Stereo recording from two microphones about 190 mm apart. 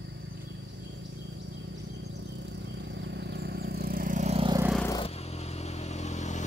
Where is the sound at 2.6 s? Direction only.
65° right (ahead or behind); by 4.5 s 35° right (ahead or behind).